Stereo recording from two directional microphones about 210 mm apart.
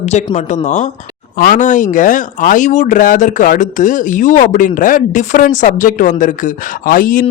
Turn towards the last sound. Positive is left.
turn(degrees=40)  # may be behind; listen again after turning